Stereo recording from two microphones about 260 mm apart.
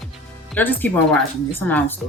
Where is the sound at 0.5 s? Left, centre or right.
Centre.